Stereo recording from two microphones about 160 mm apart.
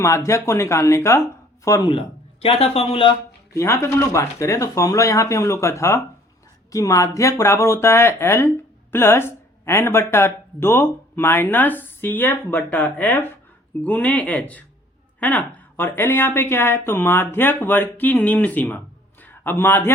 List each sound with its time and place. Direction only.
0.0 s speech: 20° left (ahead or behind)
1.9 s a man's voice: 35° left (ahead or behind)
3.5 s a man's voice: 15° left (ahead or behind)